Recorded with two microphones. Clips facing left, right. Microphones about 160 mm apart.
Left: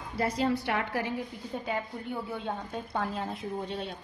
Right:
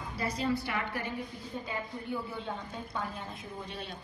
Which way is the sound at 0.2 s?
75° left (ahead or behind).